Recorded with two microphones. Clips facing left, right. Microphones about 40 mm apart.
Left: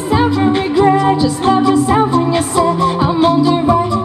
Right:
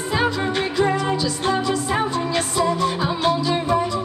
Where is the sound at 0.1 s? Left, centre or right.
Centre.